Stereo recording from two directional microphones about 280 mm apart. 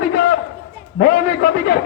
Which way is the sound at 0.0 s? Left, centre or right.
Left.